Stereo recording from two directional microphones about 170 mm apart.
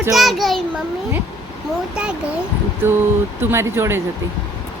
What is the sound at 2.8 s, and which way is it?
Speech, 10° right (ahead or behind).